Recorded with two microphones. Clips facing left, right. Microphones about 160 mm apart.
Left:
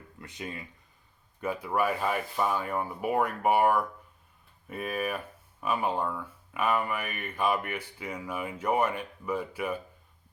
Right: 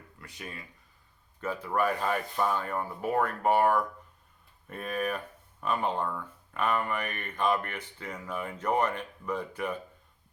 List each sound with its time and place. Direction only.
0.2 s speech: 20° left (ahead or behind)